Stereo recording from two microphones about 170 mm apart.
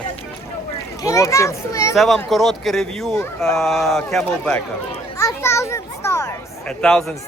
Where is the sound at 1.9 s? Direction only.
Centre (ahead or behind).